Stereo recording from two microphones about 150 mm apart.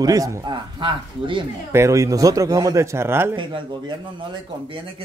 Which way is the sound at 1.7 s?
20° right (ahead or behind).